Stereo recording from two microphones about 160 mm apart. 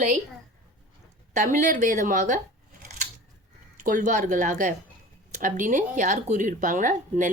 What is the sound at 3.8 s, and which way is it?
Speech, 55° right (ahead or behind).